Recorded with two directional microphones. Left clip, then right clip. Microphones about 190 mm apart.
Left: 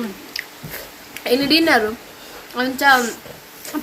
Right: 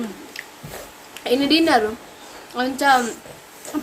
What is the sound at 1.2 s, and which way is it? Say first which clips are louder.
A woman's voice: left 2 dB; centre (ahead or behind).